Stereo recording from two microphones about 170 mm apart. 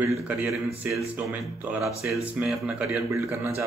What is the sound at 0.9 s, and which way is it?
A man's voice, 10° right (ahead or behind).